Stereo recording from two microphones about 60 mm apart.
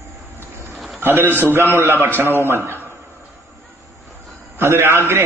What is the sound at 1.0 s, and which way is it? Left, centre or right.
A man's voice, right.